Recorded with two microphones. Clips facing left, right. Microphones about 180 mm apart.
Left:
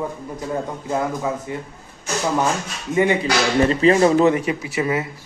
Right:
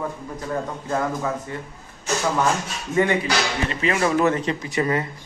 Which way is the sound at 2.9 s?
15° left (ahead or behind).